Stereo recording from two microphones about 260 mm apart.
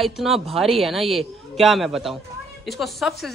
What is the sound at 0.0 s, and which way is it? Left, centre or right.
Speech, centre.